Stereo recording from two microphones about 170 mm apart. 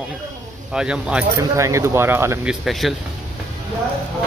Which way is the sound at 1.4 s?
20° right (ahead or behind).